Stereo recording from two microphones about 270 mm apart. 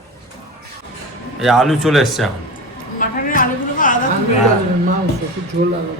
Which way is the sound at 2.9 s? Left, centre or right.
Left.